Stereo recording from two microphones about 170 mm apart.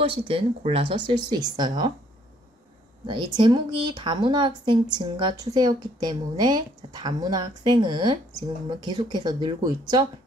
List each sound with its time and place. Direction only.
0.0 s speech: 35° right (ahead or behind)
3.1 s speech: 25° right (ahead or behind)